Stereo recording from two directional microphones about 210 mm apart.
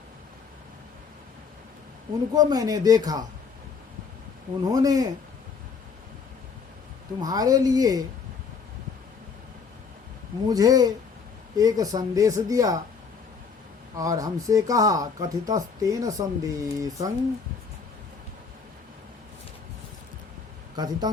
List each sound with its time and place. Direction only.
2.3 s speech: 20° right (ahead or behind)
4.7 s speech: 15° right (ahead or behind)
7.2 s speech: 15° right (ahead or behind)
10.4 s speech: 15° right (ahead or behind)
13.9 s speech: 15° right (ahead or behind)
20.7 s speech: 20° right (ahead or behind)